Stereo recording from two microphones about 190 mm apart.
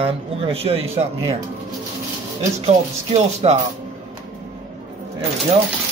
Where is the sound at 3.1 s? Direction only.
35° right (ahead or behind).